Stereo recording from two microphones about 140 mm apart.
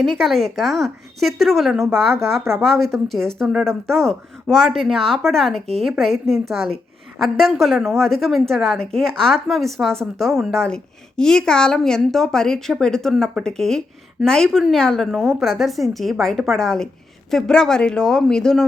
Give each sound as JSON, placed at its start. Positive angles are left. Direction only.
{"t": 0.0, "sound": "a woman's voice", "side_deg": 0}
{"t": 1.8, "sound": "speech", "side_deg": -20}
{"t": 2.6, "sound": "a woman's voice", "side_deg": 0}